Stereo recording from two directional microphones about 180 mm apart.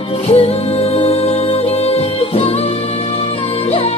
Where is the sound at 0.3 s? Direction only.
35° left (ahead or behind).